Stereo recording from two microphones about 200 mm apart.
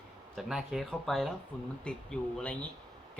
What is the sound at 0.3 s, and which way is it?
Speech, centre (ahead or behind).